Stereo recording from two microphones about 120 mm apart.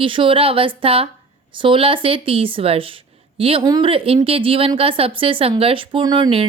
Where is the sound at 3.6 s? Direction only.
35° right (ahead or behind).